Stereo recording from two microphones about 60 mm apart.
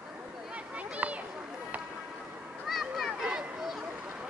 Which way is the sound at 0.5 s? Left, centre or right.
Right.